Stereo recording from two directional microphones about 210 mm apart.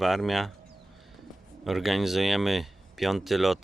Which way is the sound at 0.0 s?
Centre (ahead or behind).